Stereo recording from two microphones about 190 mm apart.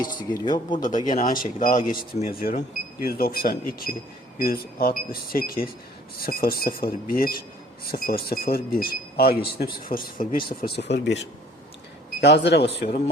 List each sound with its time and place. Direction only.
0.0 s speech: 25° left (ahead or behind)
0.9 s speech: 40° left (ahead or behind); by 12.9 s 60° left (ahead or behind)